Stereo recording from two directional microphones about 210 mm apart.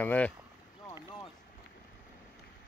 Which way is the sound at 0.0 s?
5° left (ahead or behind).